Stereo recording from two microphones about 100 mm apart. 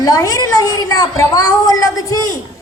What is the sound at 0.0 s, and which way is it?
Speech, 35° left (ahead or behind).